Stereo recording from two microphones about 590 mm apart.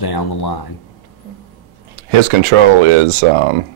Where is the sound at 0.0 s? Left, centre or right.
Left.